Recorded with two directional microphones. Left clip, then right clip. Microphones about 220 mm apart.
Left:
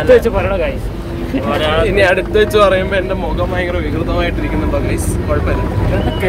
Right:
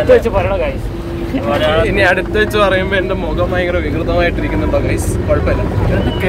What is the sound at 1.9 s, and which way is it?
Speech, 10° left (ahead or behind).